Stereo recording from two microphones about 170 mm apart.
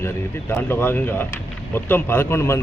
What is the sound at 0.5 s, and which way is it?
Speech, 15° left (ahead or behind).